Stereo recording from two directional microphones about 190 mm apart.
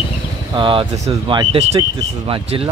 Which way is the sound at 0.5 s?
25° right (ahead or behind).